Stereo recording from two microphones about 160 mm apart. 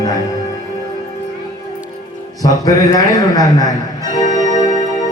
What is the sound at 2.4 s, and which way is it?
A man's voice, 20° left (ahead or behind).